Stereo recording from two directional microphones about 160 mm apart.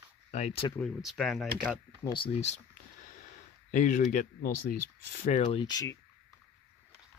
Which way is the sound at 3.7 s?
55° left (ahead or behind).